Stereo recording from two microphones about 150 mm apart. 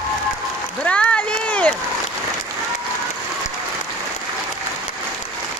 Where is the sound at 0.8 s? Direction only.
10° left (ahead or behind).